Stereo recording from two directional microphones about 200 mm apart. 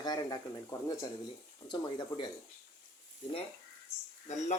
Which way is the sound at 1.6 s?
20° left (ahead or behind).